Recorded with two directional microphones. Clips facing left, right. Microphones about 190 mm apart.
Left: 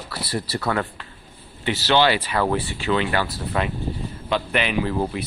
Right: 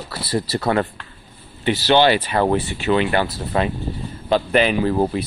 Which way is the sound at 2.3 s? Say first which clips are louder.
Right 4 dB; 25° right (ahead or behind).